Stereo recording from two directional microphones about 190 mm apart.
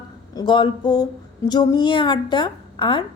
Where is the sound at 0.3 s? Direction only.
25° left (ahead or behind).